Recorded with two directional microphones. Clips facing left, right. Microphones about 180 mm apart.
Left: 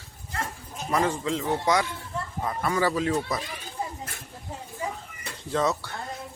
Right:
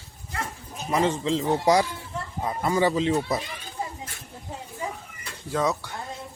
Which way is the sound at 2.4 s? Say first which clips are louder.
Right 3 dB; 20° right (ahead or behind).